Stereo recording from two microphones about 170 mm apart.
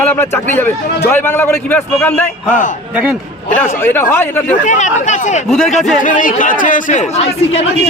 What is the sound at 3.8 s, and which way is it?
Speech, 15° left (ahead or behind).